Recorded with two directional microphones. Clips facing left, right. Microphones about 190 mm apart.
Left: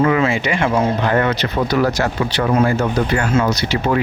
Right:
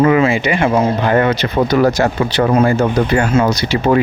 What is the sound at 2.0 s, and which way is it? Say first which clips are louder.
Speech: right 4 dB; 25° right (ahead or behind).